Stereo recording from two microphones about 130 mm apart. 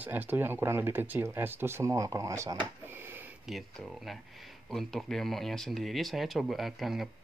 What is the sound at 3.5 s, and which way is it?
Speech, centre (ahead or behind).